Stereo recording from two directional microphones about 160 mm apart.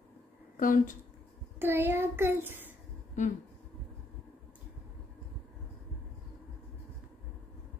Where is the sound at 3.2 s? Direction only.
50° left (ahead or behind).